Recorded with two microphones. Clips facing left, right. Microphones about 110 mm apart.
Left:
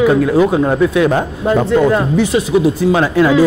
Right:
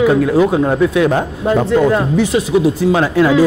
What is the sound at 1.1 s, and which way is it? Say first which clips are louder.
Speech: left 1 dB; 15° left (ahead or behind).